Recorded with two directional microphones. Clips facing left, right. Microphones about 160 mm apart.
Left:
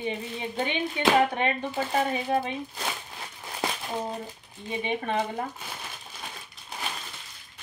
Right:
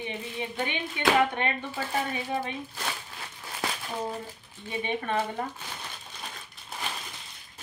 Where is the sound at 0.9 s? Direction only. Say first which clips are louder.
Left 1 dB; 35° left (ahead or behind).